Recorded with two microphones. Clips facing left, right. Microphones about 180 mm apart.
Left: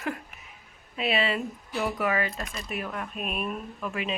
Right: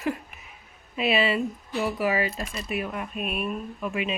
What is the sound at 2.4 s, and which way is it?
Speech, 30° right (ahead or behind).